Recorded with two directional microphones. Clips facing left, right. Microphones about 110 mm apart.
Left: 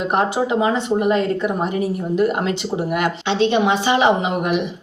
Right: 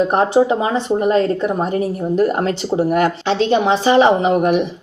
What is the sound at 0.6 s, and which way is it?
A woman's voice, 35° right (ahead or behind).